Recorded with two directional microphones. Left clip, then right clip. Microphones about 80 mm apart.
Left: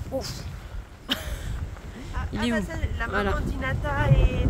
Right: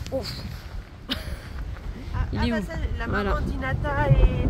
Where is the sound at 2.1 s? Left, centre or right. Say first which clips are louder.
Even; centre.